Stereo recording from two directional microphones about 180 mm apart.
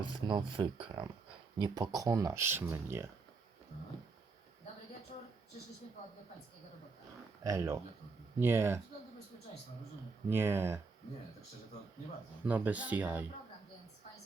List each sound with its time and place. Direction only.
0.0 s speech: 25° right (ahead or behind)
7.4 s speech: 15° right (ahead or behind)
10.2 s speech: 15° right (ahead or behind)
12.5 s speech: 10° right (ahead or behind)